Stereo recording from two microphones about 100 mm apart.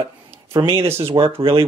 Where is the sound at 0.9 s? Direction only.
65° right (ahead or behind).